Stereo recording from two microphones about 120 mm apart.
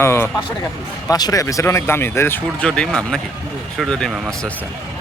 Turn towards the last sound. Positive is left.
turn(degrees=5)  # may be behind; listen again after turning